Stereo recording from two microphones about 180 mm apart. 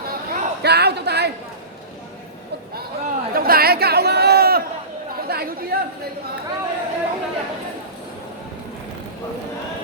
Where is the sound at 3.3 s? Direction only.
55° right (ahead or behind).